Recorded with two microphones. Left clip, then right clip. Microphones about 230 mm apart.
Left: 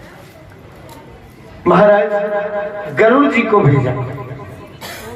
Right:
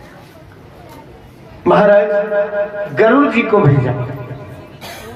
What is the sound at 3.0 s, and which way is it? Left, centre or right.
Speech, right.